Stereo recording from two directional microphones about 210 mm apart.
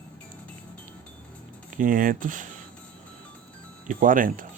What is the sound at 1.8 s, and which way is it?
Speech, 40° right (ahead or behind).